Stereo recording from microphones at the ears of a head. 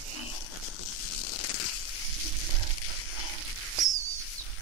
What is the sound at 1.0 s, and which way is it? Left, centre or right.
Zipper, left.